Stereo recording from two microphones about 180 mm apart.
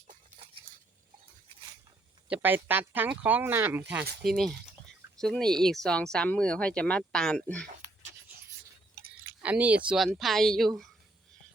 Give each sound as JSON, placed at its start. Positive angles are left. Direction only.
{"t": 0.1, "sound": "a sound", "side_deg": -35}
{"t": 2.3, "sound": "speech", "side_deg": -10}
{"t": 4.2, "sound": "speech", "side_deg": 0}
{"t": 9.4, "sound": "speech", "side_deg": -10}